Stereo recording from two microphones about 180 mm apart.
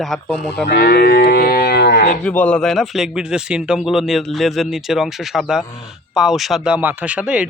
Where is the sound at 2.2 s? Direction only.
5° left (ahead or behind).